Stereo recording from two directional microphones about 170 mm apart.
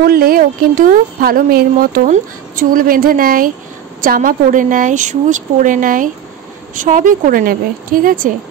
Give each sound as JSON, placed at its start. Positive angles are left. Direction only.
{"t": 0.0, "sound": "a woman's voice", "side_deg": -65}